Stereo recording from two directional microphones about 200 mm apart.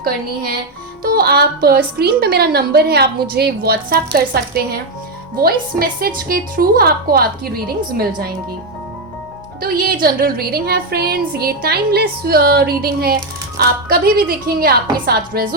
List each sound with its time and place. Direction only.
1.0 s a woman's voice: 50° right (ahead or behind)
9.6 s a woman's voice: 45° right (ahead or behind)